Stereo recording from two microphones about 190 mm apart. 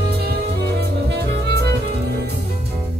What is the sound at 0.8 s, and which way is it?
Music, 60° right (ahead or behind).